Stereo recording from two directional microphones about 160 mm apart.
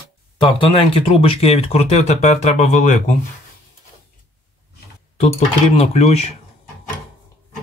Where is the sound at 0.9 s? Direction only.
35° left (ahead or behind).